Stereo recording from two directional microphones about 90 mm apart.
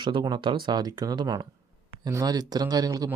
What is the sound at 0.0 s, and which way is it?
Speech, 60° right (ahead or behind).